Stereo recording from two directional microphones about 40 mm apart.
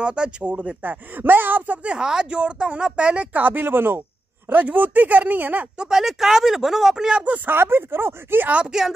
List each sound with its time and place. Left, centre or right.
0.0 s speech: right
0.8 s speech: right
2.0 s speech: centre
3.3 s speech: right
3.6 s speech: right
4.5 s speech: right
5.9 s speech: centre
7.5 s speech: right
8.6 s speech: centre